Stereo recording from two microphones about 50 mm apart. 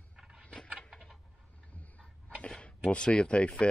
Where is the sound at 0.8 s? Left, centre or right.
Centre.